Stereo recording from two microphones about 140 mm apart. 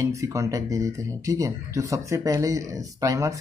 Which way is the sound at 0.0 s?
20° right (ahead or behind).